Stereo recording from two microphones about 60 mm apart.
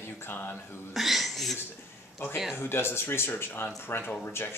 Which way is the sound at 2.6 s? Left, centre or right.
Left.